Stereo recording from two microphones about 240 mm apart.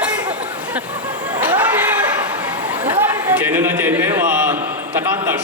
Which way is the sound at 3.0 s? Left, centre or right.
Centre.